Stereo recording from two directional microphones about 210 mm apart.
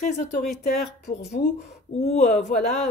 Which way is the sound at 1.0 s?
50° left (ahead or behind).